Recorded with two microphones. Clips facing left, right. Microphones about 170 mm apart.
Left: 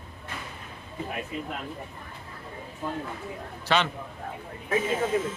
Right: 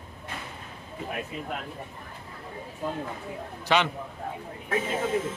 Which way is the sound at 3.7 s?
15° right (ahead or behind).